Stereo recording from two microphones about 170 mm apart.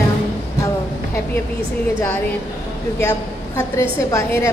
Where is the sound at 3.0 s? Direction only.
15° left (ahead or behind).